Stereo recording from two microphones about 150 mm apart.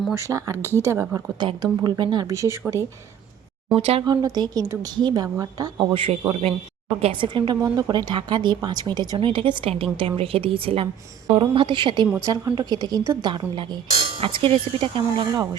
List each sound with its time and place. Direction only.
0.1 s a woman's voice: 20° right (ahead or behind)
0.6 s speech: 15° left (ahead or behind)
0.9 s speech: 15° right (ahead or behind)
1.4 s a woman's voice: 35° right (ahead or behind)
3.7 s speech: 40° right (ahead or behind)
4.0 s a woman's voice: 25° right (ahead or behind)
5.9 s a woman's voice: 35° right (ahead or behind)
12.1 s a woman's voice: 20° right (ahead or behind)